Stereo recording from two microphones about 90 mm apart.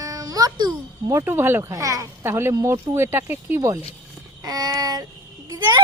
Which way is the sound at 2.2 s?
25° right (ahead or behind).